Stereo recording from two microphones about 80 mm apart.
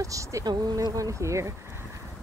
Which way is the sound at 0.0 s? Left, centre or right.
Right.